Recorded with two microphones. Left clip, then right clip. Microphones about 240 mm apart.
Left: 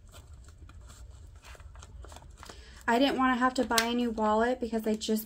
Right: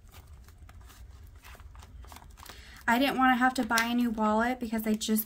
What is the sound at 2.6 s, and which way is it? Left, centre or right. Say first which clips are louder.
Speech: even; right.